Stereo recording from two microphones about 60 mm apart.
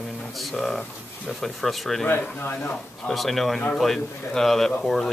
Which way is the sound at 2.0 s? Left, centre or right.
Left.